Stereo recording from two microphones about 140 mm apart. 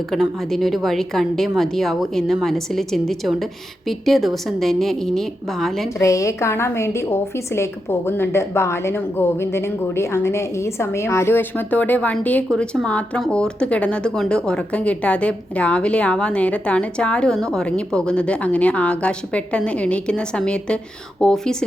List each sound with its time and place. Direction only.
0.1 s a woman's voice: centre (ahead or behind)
6.0 s a woman's voice: 20° left (ahead or behind); by 21.6 s 5° left (ahead or behind)